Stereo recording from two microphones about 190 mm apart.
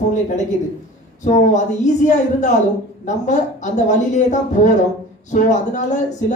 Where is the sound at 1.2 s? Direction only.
40° left (ahead or behind).